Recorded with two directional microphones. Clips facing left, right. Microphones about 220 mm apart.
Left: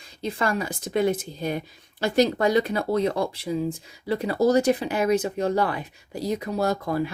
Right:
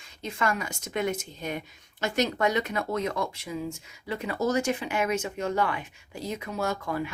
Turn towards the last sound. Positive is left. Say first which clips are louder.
# left 5 dB
turn(degrees=35)  # may be behind; listen again after turning